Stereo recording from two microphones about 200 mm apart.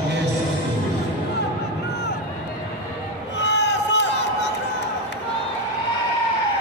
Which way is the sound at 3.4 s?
60° left (ahead or behind).